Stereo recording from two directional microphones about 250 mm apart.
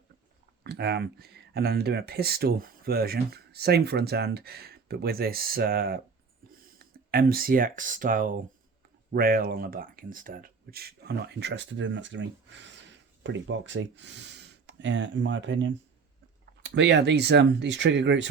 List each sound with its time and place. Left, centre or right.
0.6 s speech: right